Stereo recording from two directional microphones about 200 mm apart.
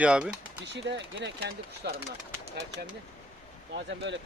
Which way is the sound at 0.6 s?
60° right (ahead or behind).